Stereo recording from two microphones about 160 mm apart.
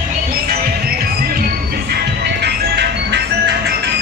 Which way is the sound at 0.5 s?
70° right (ahead or behind).